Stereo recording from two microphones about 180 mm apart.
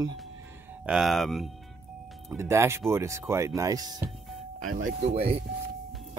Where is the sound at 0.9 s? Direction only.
Centre (ahead or behind).